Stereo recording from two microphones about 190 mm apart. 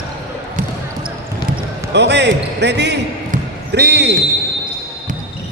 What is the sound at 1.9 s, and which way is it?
Speech, 65° right (ahead or behind).